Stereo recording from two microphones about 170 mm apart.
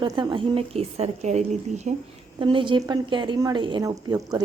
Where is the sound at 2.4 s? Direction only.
30° right (ahead or behind).